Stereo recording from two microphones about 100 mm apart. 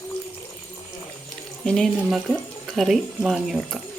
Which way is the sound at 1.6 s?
5° left (ahead or behind).